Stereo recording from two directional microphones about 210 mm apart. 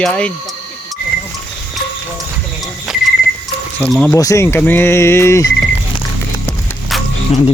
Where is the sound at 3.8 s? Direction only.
5° left (ahead or behind).